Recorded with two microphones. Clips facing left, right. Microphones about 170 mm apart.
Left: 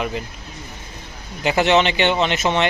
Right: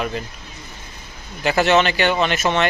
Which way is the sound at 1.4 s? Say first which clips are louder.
Even; 15° left (ahead or behind).